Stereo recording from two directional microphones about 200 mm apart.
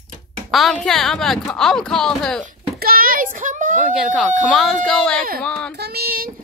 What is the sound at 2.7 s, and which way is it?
A child's voice, 45° right (ahead or behind).